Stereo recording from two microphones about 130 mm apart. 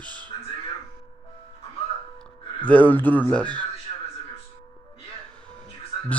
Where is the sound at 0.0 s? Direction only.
35° right (ahead or behind).